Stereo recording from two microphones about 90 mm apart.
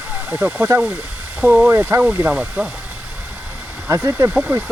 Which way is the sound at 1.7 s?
30° right (ahead or behind).